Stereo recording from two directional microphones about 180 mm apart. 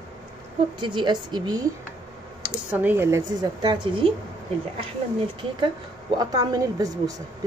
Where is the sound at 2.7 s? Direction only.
10° right (ahead or behind); by 4.1 s 25° right (ahead or behind).